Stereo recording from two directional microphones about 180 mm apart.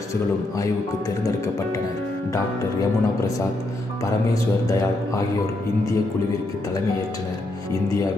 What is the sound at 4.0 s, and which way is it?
Speech, 20° left (ahead or behind).